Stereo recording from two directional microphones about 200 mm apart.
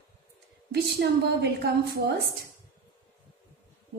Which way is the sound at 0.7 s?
50° right (ahead or behind).